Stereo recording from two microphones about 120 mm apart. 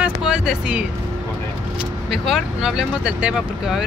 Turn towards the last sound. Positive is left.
turn(degrees=-5)  # may be behind; listen again after turning